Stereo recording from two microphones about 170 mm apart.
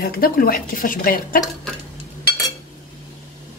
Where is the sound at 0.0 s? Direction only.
60° left (ahead or behind).